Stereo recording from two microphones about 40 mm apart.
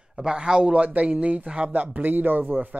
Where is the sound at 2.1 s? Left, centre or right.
Right.